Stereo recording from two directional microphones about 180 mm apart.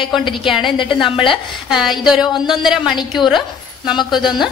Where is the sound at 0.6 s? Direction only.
25° left (ahead or behind).